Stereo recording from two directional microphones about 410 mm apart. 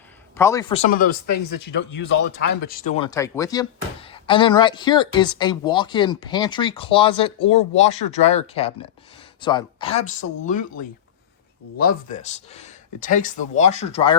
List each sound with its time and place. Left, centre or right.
0.3 s speech: centre; by 2.9 s left
3.0 s speech: centre